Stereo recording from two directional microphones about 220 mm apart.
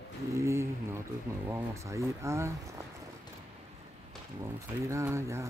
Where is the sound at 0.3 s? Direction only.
15° right (ahead or behind).